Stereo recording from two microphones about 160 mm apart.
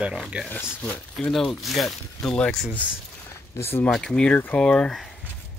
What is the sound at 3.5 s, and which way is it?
Speech, 15° left (ahead or behind).